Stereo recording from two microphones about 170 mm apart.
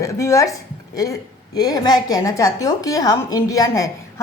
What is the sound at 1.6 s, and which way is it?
A woman's voice, 20° left (ahead or behind).